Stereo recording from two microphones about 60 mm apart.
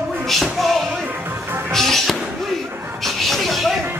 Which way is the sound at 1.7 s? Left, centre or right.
Centre.